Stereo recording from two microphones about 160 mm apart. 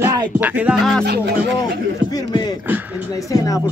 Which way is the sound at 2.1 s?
25° left (ahead or behind).